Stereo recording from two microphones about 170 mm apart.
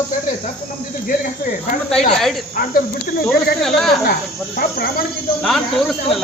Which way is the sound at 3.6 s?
Centre (ahead or behind).